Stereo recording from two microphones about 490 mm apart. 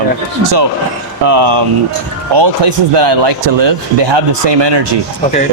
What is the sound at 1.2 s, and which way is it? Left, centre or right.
Speech, right.